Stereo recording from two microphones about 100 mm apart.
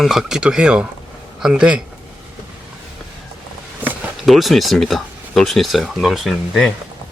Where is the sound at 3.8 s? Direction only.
20° right (ahead or behind).